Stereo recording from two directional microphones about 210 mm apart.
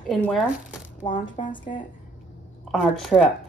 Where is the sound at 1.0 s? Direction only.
20° left (ahead or behind).